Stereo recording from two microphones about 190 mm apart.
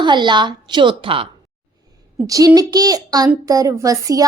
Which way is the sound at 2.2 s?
15° right (ahead or behind).